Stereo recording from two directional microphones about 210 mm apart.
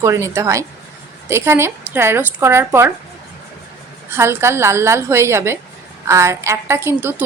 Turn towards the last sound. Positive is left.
turn(degrees=-10)  # may be behind; listen again after turning